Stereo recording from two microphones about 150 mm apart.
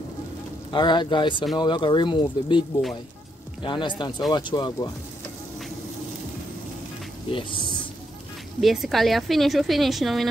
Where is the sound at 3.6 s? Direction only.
30° left (ahead or behind).